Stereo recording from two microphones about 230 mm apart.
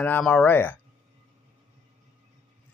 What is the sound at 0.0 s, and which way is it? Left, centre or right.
Speech, centre.